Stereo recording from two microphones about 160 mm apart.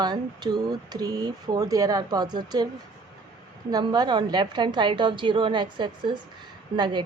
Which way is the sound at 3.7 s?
25° right (ahead or behind).